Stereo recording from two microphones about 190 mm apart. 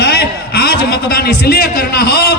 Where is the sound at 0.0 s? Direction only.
60° left (ahead or behind).